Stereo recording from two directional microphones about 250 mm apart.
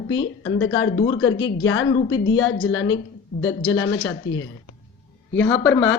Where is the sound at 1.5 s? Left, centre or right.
Left.